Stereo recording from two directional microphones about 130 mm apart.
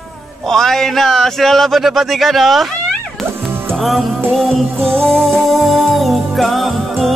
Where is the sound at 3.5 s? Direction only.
20° right (ahead or behind).